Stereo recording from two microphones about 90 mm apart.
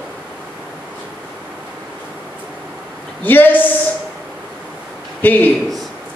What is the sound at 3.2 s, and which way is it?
Speech, 20° left (ahead or behind).